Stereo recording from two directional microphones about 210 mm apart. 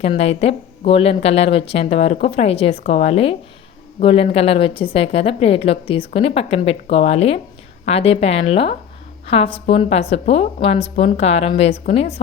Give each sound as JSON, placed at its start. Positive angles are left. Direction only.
{"t": 0.0, "sound": "speech", "side_deg": 30}